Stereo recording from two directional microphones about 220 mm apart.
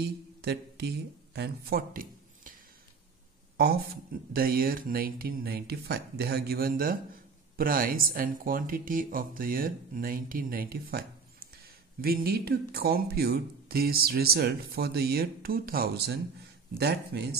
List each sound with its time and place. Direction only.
0.0 s speech: 50° right (ahead or behind)
4.3 s speech: 40° right (ahead or behind)